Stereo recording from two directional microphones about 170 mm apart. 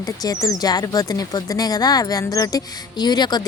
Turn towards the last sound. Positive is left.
turn(degrees=25)  # may be behind; listen again after turning